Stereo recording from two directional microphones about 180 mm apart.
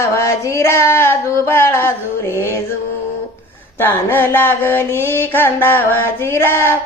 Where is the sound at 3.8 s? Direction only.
10° left (ahead or behind).